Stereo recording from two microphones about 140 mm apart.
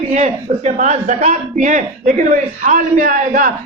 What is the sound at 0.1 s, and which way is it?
Speech, 55° right (ahead or behind).